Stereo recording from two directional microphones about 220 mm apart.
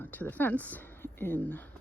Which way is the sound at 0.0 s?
10° left (ahead or behind).